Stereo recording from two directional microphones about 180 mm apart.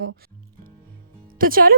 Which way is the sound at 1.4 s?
55° right (ahead or behind).